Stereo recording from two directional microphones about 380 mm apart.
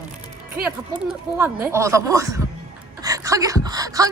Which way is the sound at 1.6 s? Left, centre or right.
Centre.